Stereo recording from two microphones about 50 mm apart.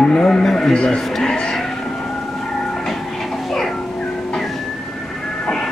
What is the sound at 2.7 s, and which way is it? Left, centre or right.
Train, centre.